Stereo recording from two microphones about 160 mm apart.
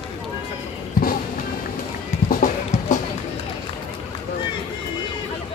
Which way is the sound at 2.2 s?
50° left (ahead or behind).